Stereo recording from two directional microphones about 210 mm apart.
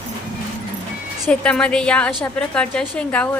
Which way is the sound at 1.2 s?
5° left (ahead or behind).